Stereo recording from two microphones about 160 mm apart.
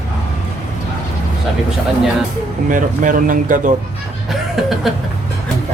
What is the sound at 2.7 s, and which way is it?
Speech, 55° right (ahead or behind).